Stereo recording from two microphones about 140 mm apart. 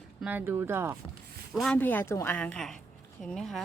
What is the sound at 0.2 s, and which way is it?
Speech, 10° right (ahead or behind).